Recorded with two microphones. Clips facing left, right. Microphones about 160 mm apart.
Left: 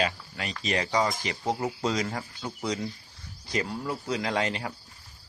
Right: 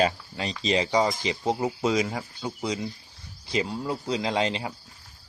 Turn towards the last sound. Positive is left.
turn(degrees=-20)  # may be behind; listen again after turning